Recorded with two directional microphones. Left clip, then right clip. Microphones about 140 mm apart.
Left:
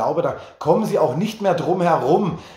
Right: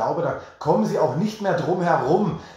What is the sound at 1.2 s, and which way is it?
Speech, 45° left (ahead or behind).